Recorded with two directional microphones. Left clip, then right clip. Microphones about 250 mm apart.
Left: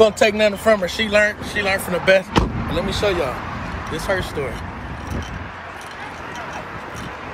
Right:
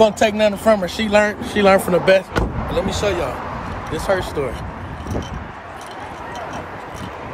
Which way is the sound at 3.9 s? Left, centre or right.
Centre.